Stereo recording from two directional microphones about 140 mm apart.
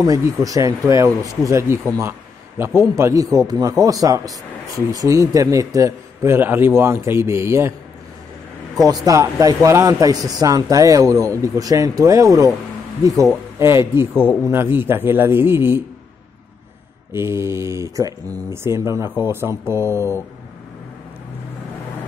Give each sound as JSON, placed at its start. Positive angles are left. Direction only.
{"t": 0.0, "sound": "a man's voice", "side_deg": -25}
{"t": 8.8, "sound": "a man's voice", "side_deg": -25}
{"t": 13.6, "sound": "a man's voice", "side_deg": -20}
{"t": 14.1, "sound": "speech", "side_deg": 10}
{"t": 14.5, "sound": "a man's voice", "side_deg": -15}
{"t": 17.1, "sound": "a man's voice", "side_deg": -20}